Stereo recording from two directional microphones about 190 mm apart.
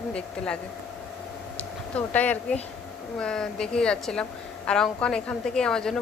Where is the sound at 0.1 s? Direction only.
5° left (ahead or behind).